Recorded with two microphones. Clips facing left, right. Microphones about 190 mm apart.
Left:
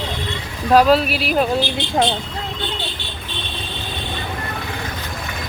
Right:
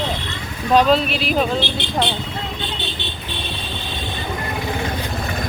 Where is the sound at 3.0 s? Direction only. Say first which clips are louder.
Right 3 dB; 20° right (ahead or behind).